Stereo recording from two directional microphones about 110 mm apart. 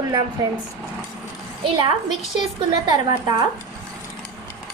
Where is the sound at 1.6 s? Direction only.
45° right (ahead or behind).